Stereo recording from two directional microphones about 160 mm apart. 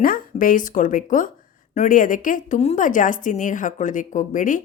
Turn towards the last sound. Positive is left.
turn(degrees=55)  # may be behind; listen again after turning